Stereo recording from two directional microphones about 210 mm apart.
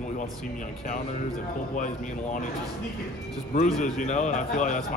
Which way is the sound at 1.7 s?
40° left (ahead or behind).